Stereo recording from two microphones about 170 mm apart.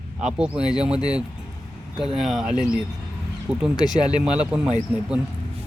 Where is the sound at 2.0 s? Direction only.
5° right (ahead or behind).